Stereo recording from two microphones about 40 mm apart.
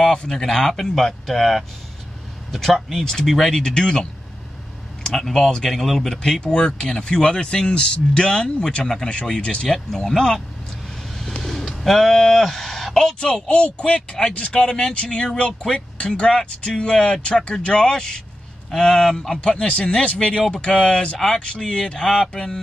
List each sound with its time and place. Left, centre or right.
0.2 s speech: centre
3.1 s speech: centre
9.6 s speech: centre
11.3 s a sound: centre
13.2 s speech: left
14.6 s speech: centre
15.0 s speech: left; by 19.4 s centre
19.4 s speech: left